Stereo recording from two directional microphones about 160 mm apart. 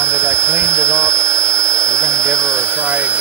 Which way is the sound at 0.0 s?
15° right (ahead or behind).